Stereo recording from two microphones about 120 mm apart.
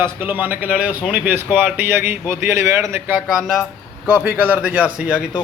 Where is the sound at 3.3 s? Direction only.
Centre (ahead or behind).